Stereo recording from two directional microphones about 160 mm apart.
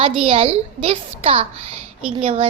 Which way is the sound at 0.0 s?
35° right (ahead or behind).